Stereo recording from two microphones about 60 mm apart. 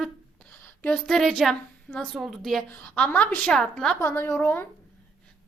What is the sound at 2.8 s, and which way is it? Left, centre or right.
Speech, centre.